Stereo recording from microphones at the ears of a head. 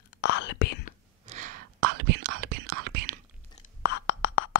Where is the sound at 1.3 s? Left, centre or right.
Right.